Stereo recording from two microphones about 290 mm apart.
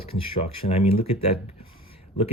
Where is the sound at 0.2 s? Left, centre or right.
Centre.